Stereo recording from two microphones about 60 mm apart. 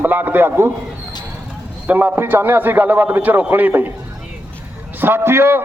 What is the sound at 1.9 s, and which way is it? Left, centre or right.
A man's voice, right.